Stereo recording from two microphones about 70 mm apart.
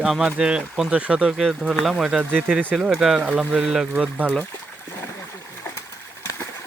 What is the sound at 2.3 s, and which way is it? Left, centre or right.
Speech, centre.